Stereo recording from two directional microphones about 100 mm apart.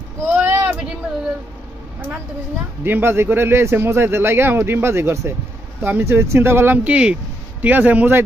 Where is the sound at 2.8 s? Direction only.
20° right (ahead or behind).